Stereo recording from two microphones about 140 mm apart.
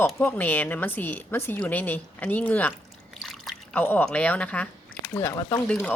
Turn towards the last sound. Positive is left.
turn(degrees=10)  # may be behind; listen again after turning